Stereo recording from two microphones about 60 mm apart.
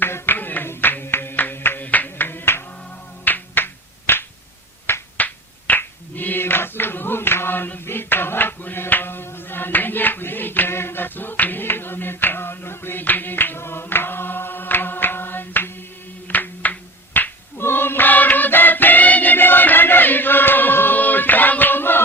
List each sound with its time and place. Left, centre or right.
0.0 s clapping: left
3.2 s a sound: left
4.9 s finger snapping: left
16.2 s music: left
17.2 s a sound: left
17.6 s music: left